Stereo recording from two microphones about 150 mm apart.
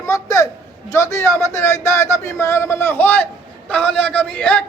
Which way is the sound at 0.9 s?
20° left (ahead or behind).